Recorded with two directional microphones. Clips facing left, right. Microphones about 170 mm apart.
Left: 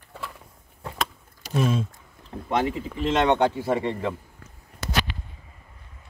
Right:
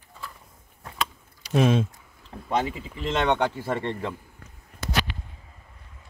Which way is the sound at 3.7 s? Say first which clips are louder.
Left 3 dB; 10° left (ahead or behind).